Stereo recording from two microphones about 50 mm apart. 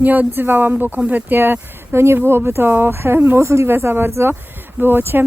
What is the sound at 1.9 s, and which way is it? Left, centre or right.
Speech, right.